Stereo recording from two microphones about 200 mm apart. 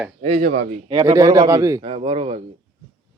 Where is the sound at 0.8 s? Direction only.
15° right (ahead or behind).